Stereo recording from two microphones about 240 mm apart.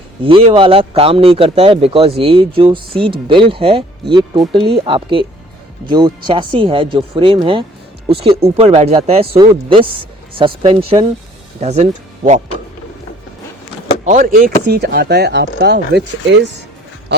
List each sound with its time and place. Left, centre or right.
0.2 s speech: right
14.0 s speech: right